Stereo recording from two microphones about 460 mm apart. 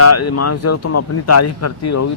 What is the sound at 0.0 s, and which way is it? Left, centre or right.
Speech, left.